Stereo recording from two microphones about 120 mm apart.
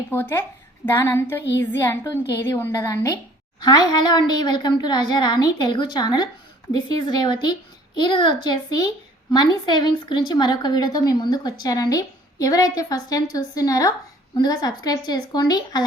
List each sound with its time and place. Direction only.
0.1 s a woman's voice: 20° left (ahead or behind)
2.7 s a woman's voice: 30° left (ahead or behind)